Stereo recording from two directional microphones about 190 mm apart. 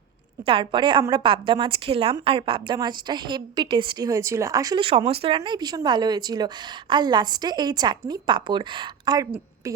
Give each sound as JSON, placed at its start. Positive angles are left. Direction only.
{"t": 0.4, "sound": "a woman's voice", "side_deg": -25}